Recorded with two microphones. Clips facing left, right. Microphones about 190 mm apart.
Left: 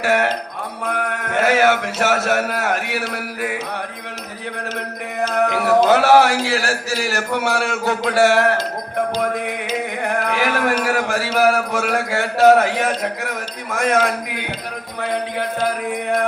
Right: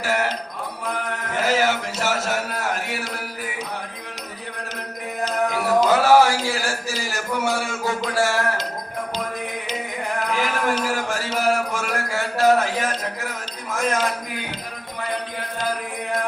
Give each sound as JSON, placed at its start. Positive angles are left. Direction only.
{"t": 0.0, "sound": "music", "side_deg": 65}
{"t": 0.9, "sound": "mantra", "side_deg": 65}
{"t": 5.3, "sound": "speech", "side_deg": 65}
{"t": 9.2, "sound": "music", "side_deg": 70}
{"t": 10.0, "sound": "a man's voice", "side_deg": 70}